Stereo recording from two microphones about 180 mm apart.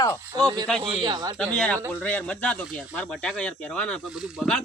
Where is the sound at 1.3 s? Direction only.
5° left (ahead or behind).